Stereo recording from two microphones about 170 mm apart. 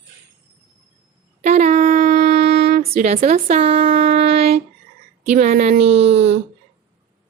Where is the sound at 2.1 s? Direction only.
70° right (ahead or behind).